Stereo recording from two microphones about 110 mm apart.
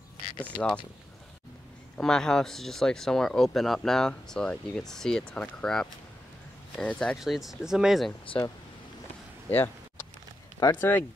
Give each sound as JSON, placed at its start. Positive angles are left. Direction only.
{"t": 0.4, "sound": "speech", "side_deg": 10}
{"t": 2.0, "sound": "speech", "side_deg": 5}
{"t": 9.5, "sound": "a sound", "side_deg": 20}
{"t": 10.6, "sound": "speech", "side_deg": 20}